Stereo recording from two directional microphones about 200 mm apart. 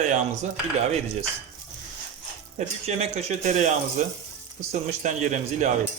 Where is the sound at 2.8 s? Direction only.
35° right (ahead or behind).